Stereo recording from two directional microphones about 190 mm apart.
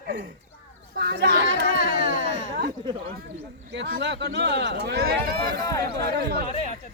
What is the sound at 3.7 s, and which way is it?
Speech, 60° right (ahead or behind).